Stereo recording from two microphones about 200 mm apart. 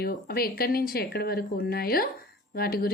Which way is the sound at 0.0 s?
50° left (ahead or behind).